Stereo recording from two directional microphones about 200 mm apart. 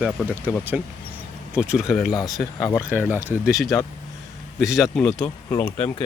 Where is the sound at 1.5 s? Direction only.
5° right (ahead or behind).